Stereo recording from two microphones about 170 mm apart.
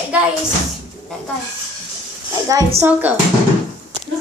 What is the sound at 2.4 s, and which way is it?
Speech, 20° right (ahead or behind).